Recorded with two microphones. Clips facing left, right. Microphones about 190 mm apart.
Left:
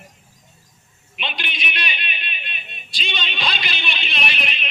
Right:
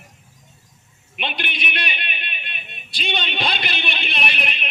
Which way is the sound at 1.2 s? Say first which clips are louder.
Right 2 dB; 55° right (ahead or behind).